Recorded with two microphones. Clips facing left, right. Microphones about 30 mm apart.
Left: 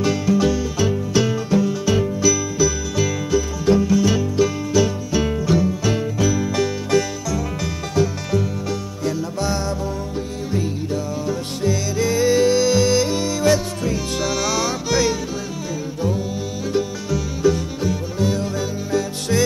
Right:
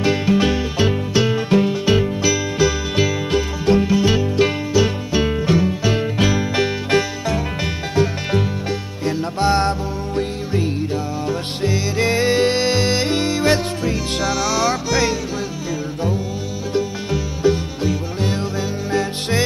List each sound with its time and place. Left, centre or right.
0.0 s music: right
1.1 s music: right
1.5 s music: right
6.1 s music: right
6.4 s music: right
9.0 s music: right
11.2 s music: right
17.1 s music: right